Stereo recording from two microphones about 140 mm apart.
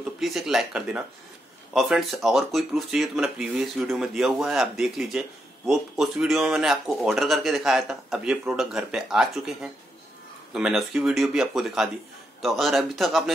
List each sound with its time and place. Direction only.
0.2 s speech: 5° right (ahead or behind)